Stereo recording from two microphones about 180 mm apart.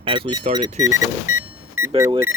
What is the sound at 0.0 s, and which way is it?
Speech, 25° right (ahead or behind).